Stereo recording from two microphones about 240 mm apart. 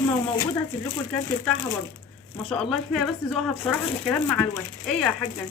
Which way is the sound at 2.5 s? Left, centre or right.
Centre.